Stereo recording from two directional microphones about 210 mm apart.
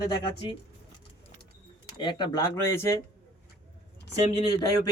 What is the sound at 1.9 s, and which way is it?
Speech, 20° left (ahead or behind).